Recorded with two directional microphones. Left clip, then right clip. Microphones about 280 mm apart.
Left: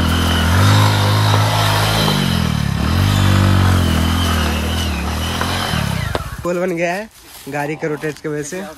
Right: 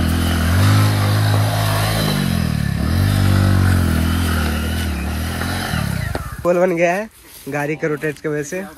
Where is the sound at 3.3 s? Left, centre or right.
Left.